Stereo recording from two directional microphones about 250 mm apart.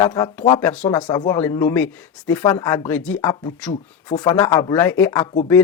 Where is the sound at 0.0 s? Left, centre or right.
Centre.